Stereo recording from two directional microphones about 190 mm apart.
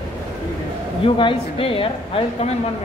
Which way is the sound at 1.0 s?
30° left (ahead or behind).